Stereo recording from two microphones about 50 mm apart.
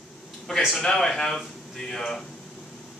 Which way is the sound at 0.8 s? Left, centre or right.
Centre.